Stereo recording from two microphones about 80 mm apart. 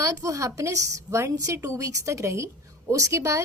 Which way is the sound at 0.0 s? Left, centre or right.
Right.